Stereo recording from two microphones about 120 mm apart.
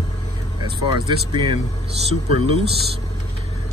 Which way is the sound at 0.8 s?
40° right (ahead or behind).